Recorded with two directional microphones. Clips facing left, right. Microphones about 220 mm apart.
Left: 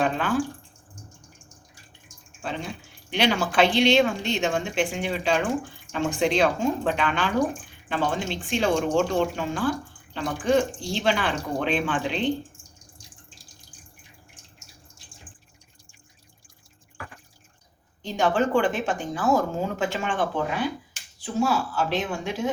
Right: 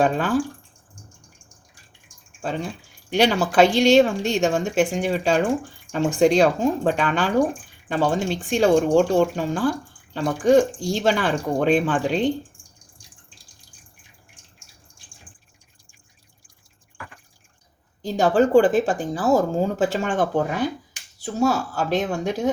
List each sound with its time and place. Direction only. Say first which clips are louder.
0.0 s speech: right 4 dB; 45° right (ahead or behind)
3.1 s speech: right 4 dB; 45° right (ahead or behind)
18.0 s speech: right 5 dB; 40° right (ahead or behind)